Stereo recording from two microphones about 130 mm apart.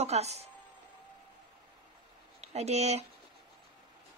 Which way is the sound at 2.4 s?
55° right (ahead or behind).